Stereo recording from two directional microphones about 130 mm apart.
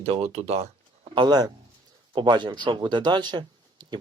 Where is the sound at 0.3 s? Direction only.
55° right (ahead or behind).